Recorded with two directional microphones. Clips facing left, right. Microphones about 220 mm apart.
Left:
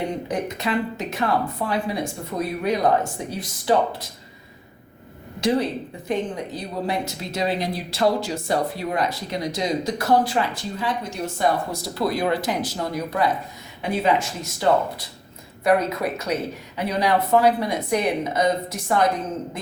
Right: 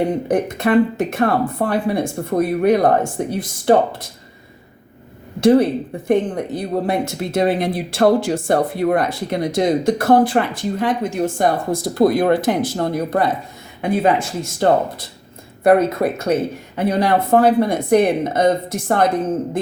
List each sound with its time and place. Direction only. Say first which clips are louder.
0.3 s speech: right 8 dB; 55° right (ahead or behind)
5.4 s speech: right 9 dB; 50° right (ahead or behind)